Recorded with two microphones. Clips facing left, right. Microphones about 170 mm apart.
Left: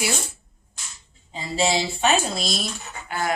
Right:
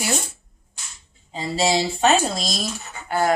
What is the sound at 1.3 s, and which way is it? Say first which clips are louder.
Speech: right 2 dB; 35° right (ahead or behind).